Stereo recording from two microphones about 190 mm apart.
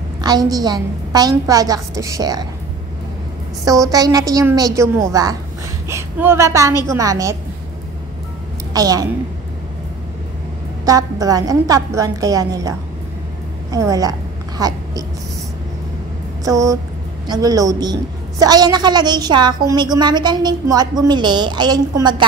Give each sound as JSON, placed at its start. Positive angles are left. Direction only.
{"t": 0.2, "sound": "a woman's voice", "side_deg": -20}
{"t": 3.6, "sound": "a woman's voice", "side_deg": -20}
{"t": 8.7, "sound": "a woman's voice", "side_deg": -20}
{"t": 10.9, "sound": "a woman's voice", "side_deg": -20}
{"t": 16.4, "sound": "a woman's voice", "side_deg": -15}